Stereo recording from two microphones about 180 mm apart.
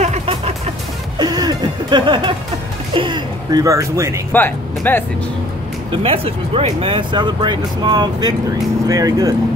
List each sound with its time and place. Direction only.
0.0 s music: 35° right (ahead or behind)
1.1 s music: 20° right (ahead or behind)
2.9 s speech: 25° right (ahead or behind)
4.3 s speech: 10° left (ahead or behind)
5.9 s speech: 30° right (ahead or behind)